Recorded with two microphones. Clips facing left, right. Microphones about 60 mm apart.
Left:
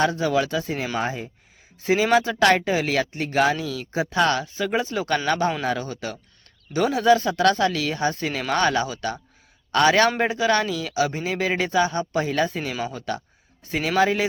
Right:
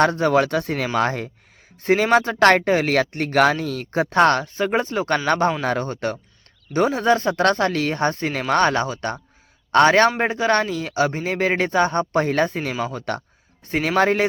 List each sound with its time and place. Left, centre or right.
0.0 s speech: right
1.8 s speech: right